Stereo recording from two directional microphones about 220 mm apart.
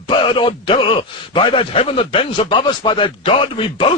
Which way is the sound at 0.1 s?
20° left (ahead or behind).